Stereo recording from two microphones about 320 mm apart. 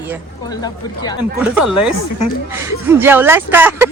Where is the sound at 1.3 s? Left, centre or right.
Centre.